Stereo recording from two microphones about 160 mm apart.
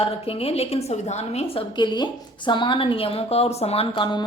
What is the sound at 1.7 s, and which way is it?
A woman's voice, 30° left (ahead or behind).